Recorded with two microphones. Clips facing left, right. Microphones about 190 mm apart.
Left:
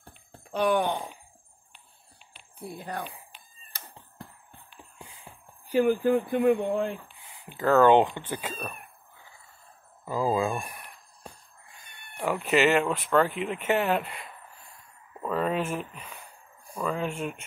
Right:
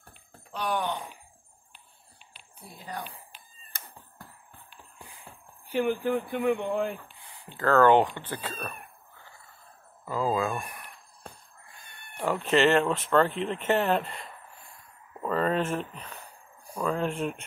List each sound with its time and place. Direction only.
0.5 s a sound: 55° left (ahead or behind)
2.6 s speech: 60° left (ahead or behind)
5.7 s speech: 40° left (ahead or behind)
7.2 s speech: 15° left (ahead or behind)
10.0 s speech: 20° left (ahead or behind)
12.2 s speech: 10° left (ahead or behind)